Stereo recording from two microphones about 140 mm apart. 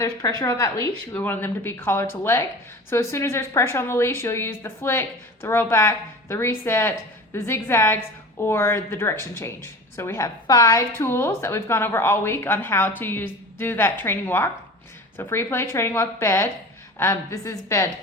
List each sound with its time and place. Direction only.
0.0 s a woman's voice: 25° left (ahead or behind)